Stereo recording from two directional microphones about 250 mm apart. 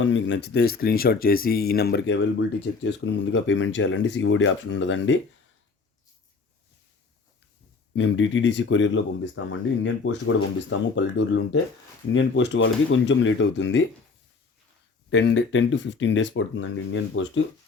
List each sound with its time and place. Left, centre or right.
0.0 s speech: left
7.9 s speech: left
15.1 s speech: left